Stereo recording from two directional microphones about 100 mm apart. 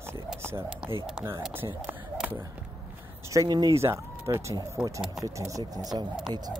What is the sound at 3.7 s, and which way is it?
Speech, 25° right (ahead or behind).